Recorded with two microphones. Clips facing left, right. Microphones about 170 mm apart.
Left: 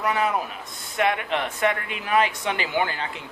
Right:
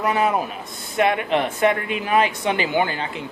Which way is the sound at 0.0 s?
25° right (ahead or behind).